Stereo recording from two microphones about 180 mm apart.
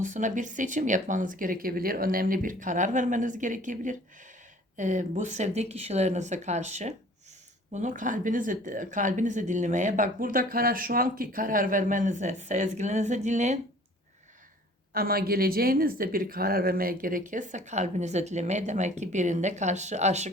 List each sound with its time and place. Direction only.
0.0 s speech: 45° right (ahead or behind)
14.9 s speech: 55° right (ahead or behind); by 20.3 s 40° right (ahead or behind)